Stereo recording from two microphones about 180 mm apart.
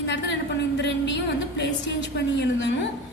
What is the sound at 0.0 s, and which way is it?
A woman's voice, 80° left.